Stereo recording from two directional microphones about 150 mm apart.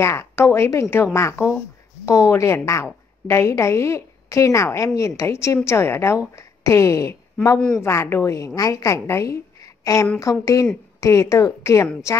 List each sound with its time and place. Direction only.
0.0 s a woman's voice: 20° left (ahead or behind)